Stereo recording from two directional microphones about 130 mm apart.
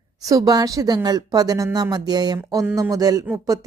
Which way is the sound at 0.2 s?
25° right (ahead or behind).